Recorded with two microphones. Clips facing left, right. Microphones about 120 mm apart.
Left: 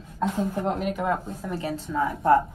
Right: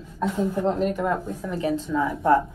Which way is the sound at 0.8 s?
5° left (ahead or behind).